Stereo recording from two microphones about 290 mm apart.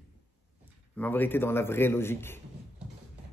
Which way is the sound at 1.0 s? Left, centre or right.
Centre.